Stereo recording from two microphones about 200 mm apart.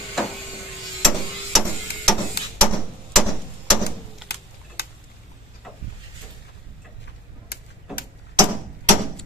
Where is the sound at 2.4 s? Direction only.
55° left (ahead or behind).